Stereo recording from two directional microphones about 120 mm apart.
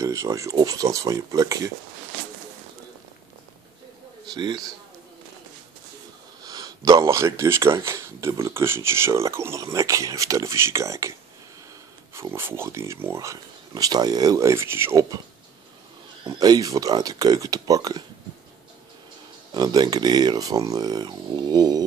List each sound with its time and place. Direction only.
0.0 s speech: 25° right (ahead or behind)
4.3 s speech: 35° right (ahead or behind)
6.4 s speech: 35° right (ahead or behind)
16.3 s speech: 30° right (ahead or behind)
19.5 s speech: 35° right (ahead or behind)